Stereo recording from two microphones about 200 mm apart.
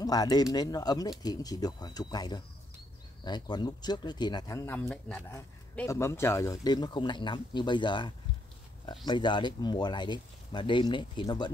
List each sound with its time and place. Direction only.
0.0 s speech: 20° left (ahead or behind)